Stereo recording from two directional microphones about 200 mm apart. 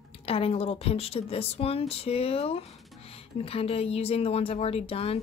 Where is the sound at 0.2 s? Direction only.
30° left (ahead or behind).